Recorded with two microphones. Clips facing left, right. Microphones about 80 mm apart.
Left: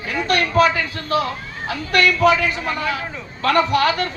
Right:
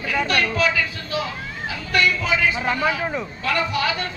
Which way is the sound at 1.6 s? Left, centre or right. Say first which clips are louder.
Left 3 dB; left.